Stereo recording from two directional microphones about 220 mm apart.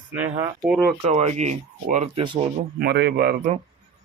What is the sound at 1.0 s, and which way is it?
Speech, 30° right (ahead or behind).